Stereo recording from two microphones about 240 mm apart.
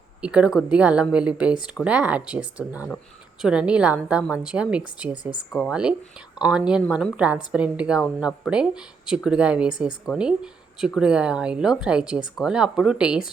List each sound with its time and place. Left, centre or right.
0.2 s speech: centre